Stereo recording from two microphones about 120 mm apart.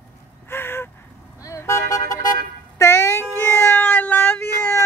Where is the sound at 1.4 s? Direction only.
25° left (ahead or behind).